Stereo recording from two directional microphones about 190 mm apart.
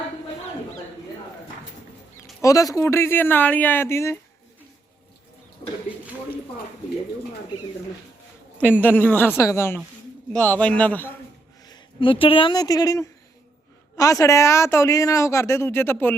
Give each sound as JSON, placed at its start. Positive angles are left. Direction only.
{"t": 2.4, "sound": "a woman's voice", "side_deg": 15}
{"t": 8.5, "sound": "a woman's voice", "side_deg": 10}
{"t": 11.6, "sound": "a woman's voice", "side_deg": 25}